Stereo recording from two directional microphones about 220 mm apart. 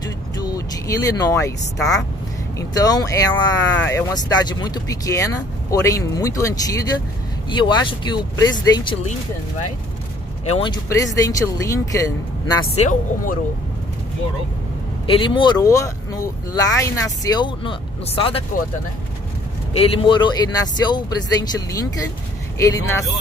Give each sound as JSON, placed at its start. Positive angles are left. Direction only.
{"t": 0.4, "sound": "vehicle", "side_deg": 15}
{"t": 2.7, "sound": "speech", "side_deg": 15}
{"t": 10.5, "sound": "speech", "side_deg": 20}
{"t": 12.7, "sound": "speech", "side_deg": 35}
{"t": 15.0, "sound": "speech", "side_deg": 20}
{"t": 19.7, "sound": "speech", "side_deg": 25}